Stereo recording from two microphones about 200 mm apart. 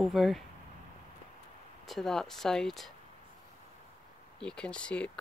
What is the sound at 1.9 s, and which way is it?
Speech, centre (ahead or behind).